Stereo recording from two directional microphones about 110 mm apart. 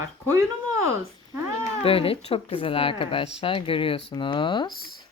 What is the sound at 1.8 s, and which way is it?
A woman's voice, 60° left (ahead or behind).